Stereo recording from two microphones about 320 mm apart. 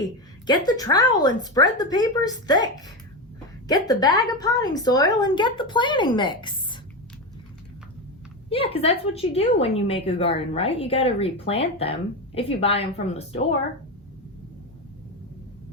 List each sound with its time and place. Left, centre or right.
0.4 s a woman's voice: centre
8.4 s a woman's voice: centre